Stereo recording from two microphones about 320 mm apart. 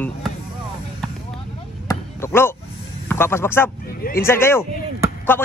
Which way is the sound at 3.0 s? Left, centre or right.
Centre.